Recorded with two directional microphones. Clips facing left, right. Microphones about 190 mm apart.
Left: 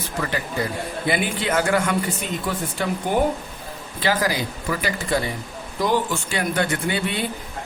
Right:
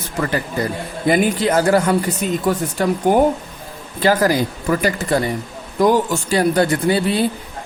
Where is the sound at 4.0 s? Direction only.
45° right (ahead or behind).